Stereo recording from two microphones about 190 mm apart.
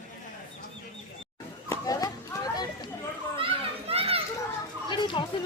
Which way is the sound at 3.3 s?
30° right (ahead or behind).